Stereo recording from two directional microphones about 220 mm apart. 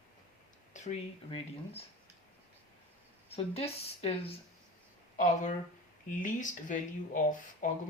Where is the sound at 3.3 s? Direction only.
25° left (ahead or behind).